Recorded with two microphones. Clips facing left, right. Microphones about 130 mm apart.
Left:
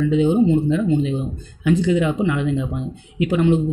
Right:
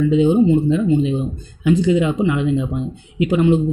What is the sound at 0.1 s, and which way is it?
A man's voice, 20° right (ahead or behind).